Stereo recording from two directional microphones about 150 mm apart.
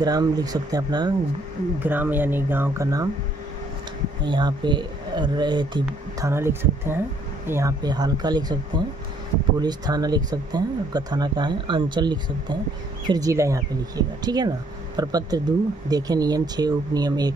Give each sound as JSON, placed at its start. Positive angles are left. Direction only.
{"t": 0.0, "sound": "speech", "side_deg": -25}
{"t": 1.8, "sound": "speech", "side_deg": -10}
{"t": 4.2, "sound": "speech", "side_deg": -30}
{"t": 6.3, "sound": "speech", "side_deg": -15}
{"t": 7.8, "sound": "speech", "side_deg": -25}